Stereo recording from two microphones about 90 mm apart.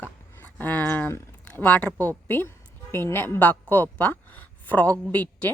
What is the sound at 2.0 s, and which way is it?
A woman's voice, 20° left (ahead or behind).